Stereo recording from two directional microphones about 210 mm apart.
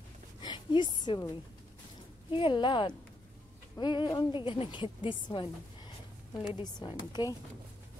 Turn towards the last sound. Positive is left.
turn(degrees=20)  # may be behind; listen again after turning